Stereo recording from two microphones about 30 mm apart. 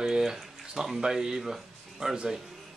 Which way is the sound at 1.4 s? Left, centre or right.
Centre.